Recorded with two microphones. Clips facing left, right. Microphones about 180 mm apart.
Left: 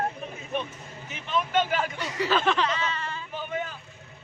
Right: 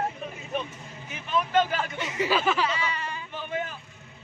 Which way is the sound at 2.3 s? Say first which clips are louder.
Left 2 dB; 5° right (ahead or behind).